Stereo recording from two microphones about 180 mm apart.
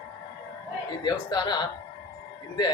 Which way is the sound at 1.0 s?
25° left (ahead or behind).